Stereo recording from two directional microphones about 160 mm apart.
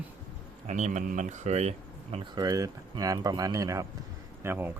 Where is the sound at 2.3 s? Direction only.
25° right (ahead or behind).